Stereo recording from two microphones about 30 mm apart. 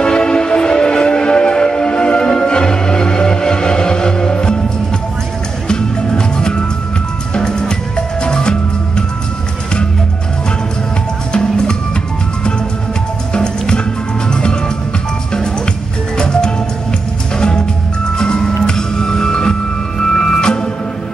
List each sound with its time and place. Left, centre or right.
0.0 s music: left
5.7 s music: left
7.3 s drum: left
8.2 s music: left
11.3 s music: left
13.3 s music: left